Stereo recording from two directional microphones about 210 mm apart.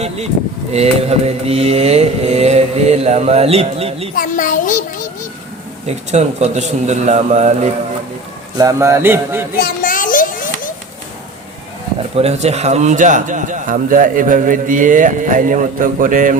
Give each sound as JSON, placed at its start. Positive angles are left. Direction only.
{"t": 0.7, "sound": "speech", "side_deg": -30}
{"t": 4.1, "sound": "a sound", "side_deg": 40}
{"t": 5.8, "sound": "speech", "side_deg": -35}
{"t": 8.5, "sound": "speech", "side_deg": -15}
{"t": 9.6, "sound": "a sound", "side_deg": 45}
{"t": 12.1, "sound": "speech", "side_deg": -30}